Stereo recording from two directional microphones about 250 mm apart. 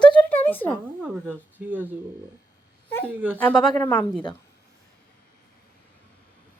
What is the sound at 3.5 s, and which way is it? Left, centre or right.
Speech, centre.